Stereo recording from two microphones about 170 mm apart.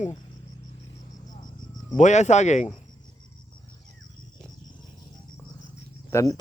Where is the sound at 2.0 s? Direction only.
45° left (ahead or behind).